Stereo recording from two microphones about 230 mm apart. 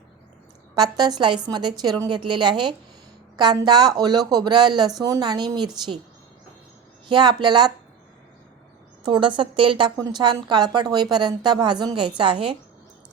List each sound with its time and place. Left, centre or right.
0.8 s a woman's voice: centre
7.1 s a woman's voice: centre
9.0 s a woman's voice: centre